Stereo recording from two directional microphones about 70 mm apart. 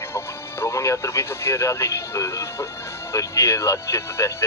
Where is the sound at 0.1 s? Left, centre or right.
Left.